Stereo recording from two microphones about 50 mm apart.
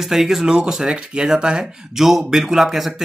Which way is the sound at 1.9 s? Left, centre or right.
Centre.